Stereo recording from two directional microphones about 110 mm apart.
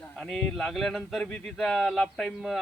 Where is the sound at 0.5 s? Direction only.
Centre (ahead or behind).